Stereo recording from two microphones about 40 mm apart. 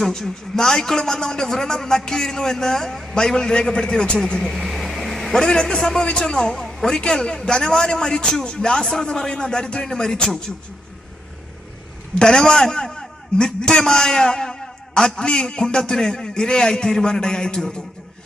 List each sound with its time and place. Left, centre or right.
0.0 s a man's voice: centre
3.2 s a man's voice: centre
4.2 s a sound: centre
5.4 s a man's voice: centre
6.7 s a sound: centre
6.9 s a man's voice: centre
12.2 s a man's voice: centre